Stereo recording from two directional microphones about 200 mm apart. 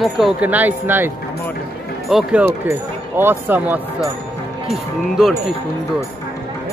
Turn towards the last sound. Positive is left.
turn(degrees=0)  # may be behind; listen again after turning